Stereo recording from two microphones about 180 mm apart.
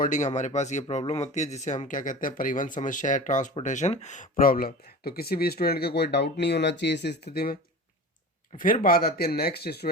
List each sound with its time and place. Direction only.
0.0 s speech: 45° left (ahead or behind); by 9.9 s 60° left (ahead or behind)